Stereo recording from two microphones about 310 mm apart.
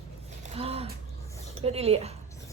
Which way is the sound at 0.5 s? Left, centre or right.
Centre.